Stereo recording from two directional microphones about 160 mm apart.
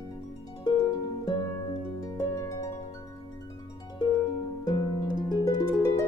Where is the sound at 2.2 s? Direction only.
20° left (ahead or behind).